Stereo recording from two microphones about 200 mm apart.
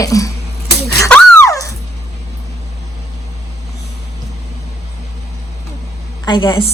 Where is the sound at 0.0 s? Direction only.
15° left (ahead or behind).